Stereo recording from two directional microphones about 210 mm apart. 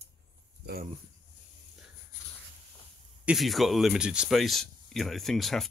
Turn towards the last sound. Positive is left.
turn(degrees=0)  # may be behind; listen again after turning